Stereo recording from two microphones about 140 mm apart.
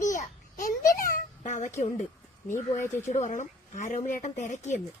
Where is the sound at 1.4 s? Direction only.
60° left (ahead or behind).